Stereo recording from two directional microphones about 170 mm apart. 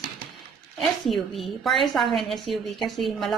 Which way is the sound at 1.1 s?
Centre (ahead or behind).